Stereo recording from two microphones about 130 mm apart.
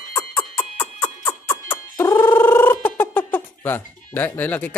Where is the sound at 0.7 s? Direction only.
15° left (ahead or behind).